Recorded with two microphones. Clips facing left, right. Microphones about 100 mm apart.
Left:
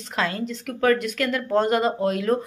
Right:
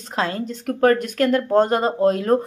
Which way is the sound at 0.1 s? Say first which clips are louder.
Right 2 dB; 30° right (ahead or behind).